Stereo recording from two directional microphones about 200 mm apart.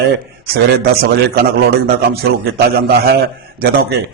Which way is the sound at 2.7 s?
50° right (ahead or behind).